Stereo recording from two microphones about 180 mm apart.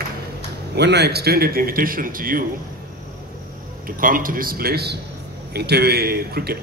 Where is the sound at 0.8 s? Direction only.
70° right (ahead or behind); by 2.4 s 50° right (ahead or behind).